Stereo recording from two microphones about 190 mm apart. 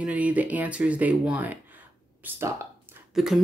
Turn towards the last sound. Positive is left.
turn(degrees=0)  # may be behind; listen again after turning